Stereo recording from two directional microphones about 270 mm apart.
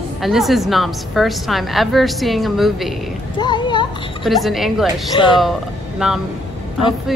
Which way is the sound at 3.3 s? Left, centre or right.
Centre.